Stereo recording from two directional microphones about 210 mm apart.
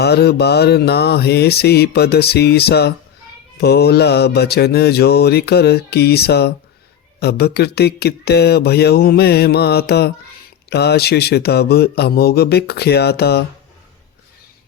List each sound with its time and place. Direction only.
0.0 s mantra: 50° left (ahead or behind)